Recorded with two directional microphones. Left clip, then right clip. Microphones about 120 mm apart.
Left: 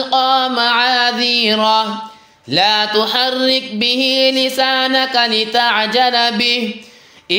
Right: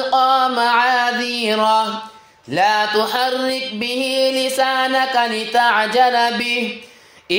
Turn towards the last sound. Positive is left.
turn(degrees=10)  # may be behind; listen again after turning